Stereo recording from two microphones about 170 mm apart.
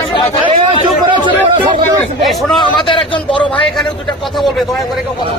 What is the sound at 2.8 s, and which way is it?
Speech, 30° left (ahead or behind).